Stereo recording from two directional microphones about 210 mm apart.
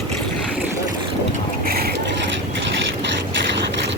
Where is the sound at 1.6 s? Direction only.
45° right (ahead or behind).